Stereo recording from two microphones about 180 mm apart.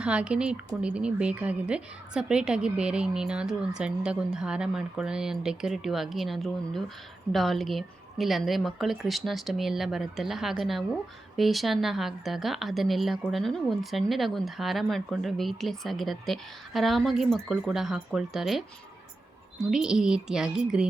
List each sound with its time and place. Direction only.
0.0 s speech: 5° right (ahead or behind)
19.7 s speech: 5° right (ahead or behind)